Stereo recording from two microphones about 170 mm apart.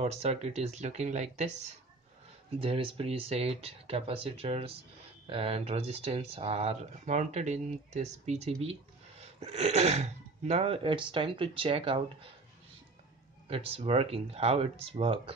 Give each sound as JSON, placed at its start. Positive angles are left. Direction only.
{"t": 0.0, "sound": "speech", "side_deg": -40}
{"t": 13.5, "sound": "speech", "side_deg": -35}